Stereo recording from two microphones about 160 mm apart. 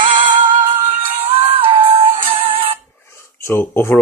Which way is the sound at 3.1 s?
15° left (ahead or behind).